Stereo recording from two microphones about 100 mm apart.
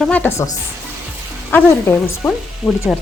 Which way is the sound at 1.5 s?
25° left (ahead or behind).